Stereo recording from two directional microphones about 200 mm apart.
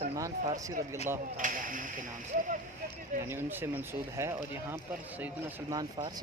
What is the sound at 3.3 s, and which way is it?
Speech, 10° right (ahead or behind).